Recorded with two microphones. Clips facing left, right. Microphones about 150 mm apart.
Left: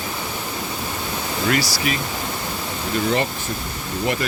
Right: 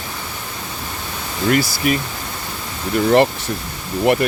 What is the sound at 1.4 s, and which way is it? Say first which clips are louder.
Speech: right 5 dB; 45° right (ahead or behind).